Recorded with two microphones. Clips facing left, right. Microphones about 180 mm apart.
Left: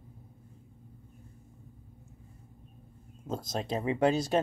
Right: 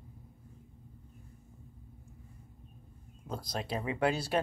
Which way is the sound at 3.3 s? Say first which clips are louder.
Left 4 dB; 25° left (ahead or behind).